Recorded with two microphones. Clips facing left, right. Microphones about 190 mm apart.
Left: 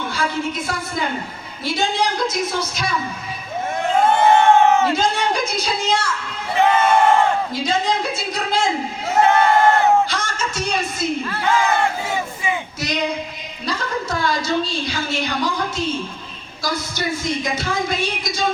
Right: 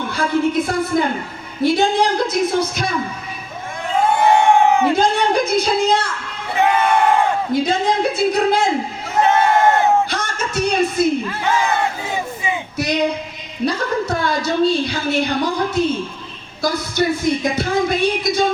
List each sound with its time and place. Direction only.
0.1 s speech: 55° right (ahead or behind)
4.0 s crowd: 15° right (ahead or behind)
4.9 s speech: 55° right (ahead or behind)
6.6 s crowd: 15° right (ahead or behind)
7.5 s speech: 55° right (ahead or behind)
9.2 s crowd: 20° right (ahead or behind)
10.1 s music: 60° right (ahead or behind)
11.3 s battle cry: 20° right (ahead or behind)
12.1 s crowd: 20° right (ahead or behind)
13.7 s a woman's voice: 60° right (ahead or behind)